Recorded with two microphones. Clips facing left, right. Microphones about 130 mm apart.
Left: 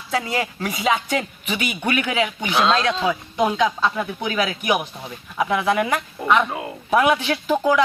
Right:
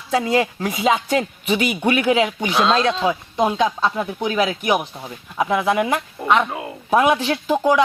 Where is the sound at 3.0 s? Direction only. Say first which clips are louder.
Right 1 dB; 25° right (ahead or behind).